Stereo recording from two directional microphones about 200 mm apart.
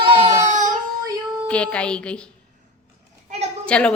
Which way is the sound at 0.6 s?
20° right (ahead or behind).